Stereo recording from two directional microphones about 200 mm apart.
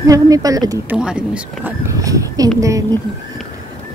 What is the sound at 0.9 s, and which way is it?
Speech, 5° right (ahead or behind).